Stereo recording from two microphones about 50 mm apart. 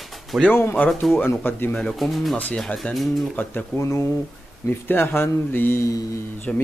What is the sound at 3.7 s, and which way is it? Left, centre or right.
Speech, left.